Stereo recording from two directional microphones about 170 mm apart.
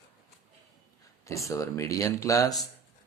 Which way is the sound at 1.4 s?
20° left (ahead or behind).